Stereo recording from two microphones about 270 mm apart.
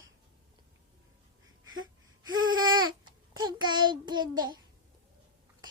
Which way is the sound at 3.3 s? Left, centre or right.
Centre.